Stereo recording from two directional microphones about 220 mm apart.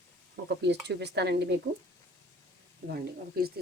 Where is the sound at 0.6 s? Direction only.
50° right (ahead or behind).